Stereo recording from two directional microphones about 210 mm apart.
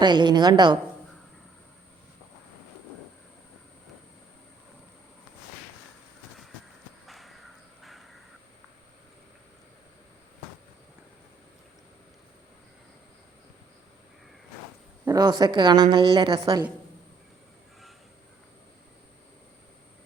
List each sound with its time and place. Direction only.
0.0 s a woman's voice: 20° right (ahead or behind)
7.1 s a sound: centre (ahead or behind)
15.0 s a woman's voice: 20° right (ahead or behind)